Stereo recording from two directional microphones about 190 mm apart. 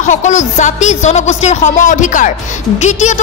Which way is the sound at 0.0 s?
40° left (ahead or behind).